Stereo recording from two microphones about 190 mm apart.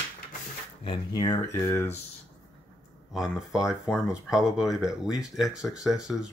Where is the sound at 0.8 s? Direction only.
20° left (ahead or behind).